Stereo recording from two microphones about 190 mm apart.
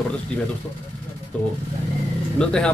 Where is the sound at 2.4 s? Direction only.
5° left (ahead or behind).